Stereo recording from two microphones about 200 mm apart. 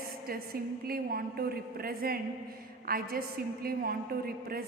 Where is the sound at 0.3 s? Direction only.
50° right (ahead or behind).